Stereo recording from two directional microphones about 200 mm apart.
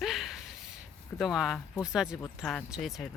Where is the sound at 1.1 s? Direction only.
Centre (ahead or behind).